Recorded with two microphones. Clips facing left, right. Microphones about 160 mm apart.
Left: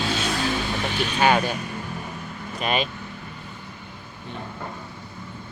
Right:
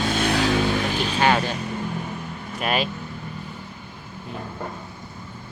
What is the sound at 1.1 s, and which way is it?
Speech, 15° left (ahead or behind).